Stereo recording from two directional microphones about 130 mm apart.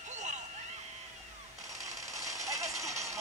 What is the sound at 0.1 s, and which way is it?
Vehicle, 65° right (ahead or behind).